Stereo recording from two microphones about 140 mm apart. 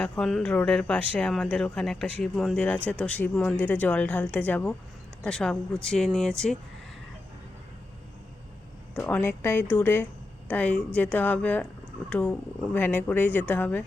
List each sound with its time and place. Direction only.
0.0 s speech: 5° left (ahead or behind)
9.0 s speech: 10° left (ahead or behind)